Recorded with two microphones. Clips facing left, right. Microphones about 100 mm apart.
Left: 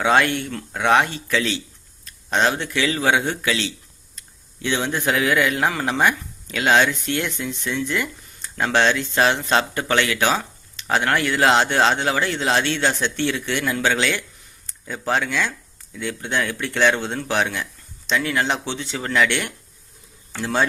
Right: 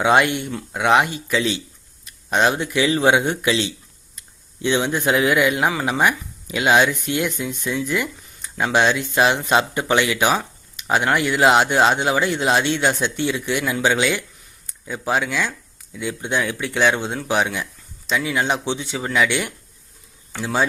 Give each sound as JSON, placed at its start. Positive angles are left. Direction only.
{"t": 0.0, "sound": "speech", "side_deg": -15}